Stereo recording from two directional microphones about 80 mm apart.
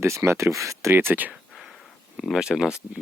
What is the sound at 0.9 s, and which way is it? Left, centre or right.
Speech, right.